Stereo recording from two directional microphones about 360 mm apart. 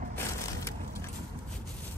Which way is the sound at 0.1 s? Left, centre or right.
Centre.